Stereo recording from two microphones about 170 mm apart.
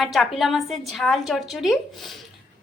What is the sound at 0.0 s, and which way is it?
A woman's voice, centre (ahead or behind).